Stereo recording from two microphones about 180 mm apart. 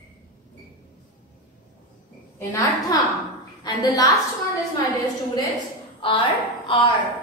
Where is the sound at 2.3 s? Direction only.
15° left (ahead or behind).